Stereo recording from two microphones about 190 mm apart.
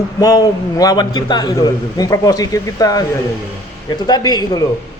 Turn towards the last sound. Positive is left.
turn(degrees=20)  # may be behind; listen again after turning